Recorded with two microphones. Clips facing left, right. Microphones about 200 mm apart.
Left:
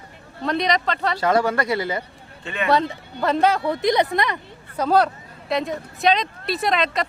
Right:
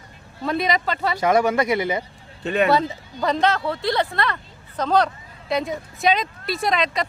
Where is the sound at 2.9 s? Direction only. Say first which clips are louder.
Left 1 dB; centre (ahead or behind).